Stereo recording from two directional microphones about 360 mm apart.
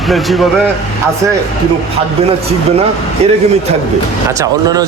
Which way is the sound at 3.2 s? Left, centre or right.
Centre.